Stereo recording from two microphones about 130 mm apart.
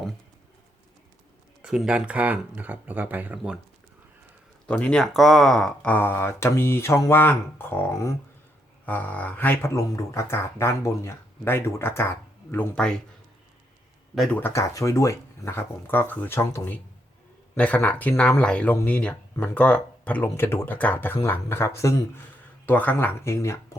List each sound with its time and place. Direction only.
1.6 s speech: 5° right (ahead or behind)
4.7 s speech: 10° left (ahead or behind)
12.7 s speech: 5° left (ahead or behind)
14.3 s speech: 20° left (ahead or behind)